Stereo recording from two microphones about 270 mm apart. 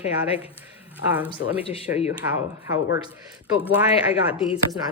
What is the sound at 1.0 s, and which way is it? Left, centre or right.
Speech, left.